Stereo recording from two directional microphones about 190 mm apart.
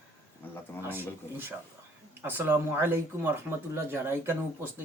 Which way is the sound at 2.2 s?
10° right (ahead or behind).